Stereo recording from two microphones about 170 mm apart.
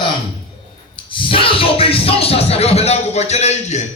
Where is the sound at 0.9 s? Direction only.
30° left (ahead or behind).